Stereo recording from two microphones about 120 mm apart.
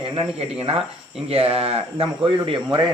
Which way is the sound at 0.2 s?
50° right (ahead or behind).